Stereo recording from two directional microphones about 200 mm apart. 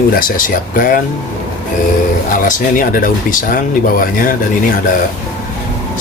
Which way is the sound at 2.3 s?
40° left (ahead or behind).